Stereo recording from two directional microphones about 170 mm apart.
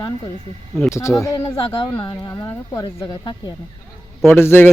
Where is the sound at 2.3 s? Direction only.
15° left (ahead or behind).